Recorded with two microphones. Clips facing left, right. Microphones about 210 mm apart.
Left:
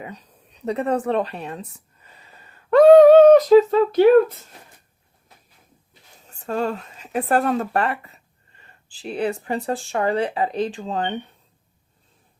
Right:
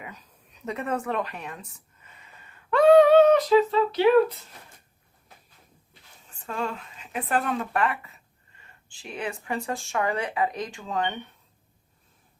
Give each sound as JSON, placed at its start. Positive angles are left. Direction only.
{"t": 0.0, "sound": "speech", "side_deg": 30}
{"t": 6.2, "sound": "speech", "side_deg": 40}